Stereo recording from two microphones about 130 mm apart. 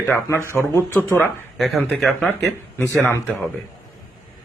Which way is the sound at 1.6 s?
Centre (ahead or behind).